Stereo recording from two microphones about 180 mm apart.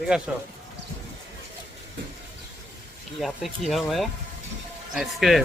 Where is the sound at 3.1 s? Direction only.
Centre (ahead or behind).